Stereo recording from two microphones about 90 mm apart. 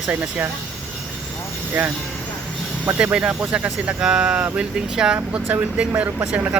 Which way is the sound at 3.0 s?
15° right (ahead or behind).